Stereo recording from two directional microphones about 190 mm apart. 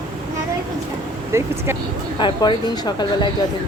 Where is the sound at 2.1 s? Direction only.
25° left (ahead or behind).